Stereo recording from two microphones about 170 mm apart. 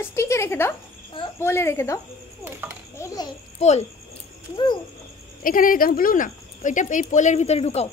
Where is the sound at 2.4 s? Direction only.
10° right (ahead or behind).